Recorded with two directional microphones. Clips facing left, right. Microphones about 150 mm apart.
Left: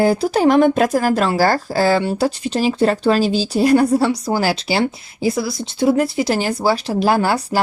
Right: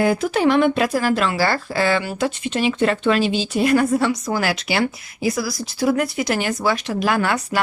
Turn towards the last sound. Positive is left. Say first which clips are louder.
# left 4 dB
turn(degrees=35)  # may be behind; listen again after turning